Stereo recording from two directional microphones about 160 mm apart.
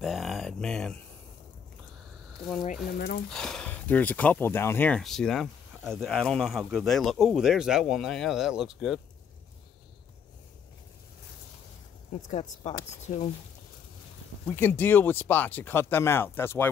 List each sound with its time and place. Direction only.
0.0 s a sound: centre (ahead or behind)
3.3 s speech: 5° left (ahead or behind)
12.1 s speech: 45° left (ahead or behind)
14.5 s speech: 15° left (ahead or behind)